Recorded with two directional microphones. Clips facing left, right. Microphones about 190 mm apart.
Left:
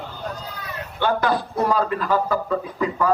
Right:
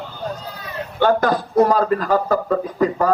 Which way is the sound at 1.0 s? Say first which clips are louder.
Right 4 dB; 45° right (ahead or behind).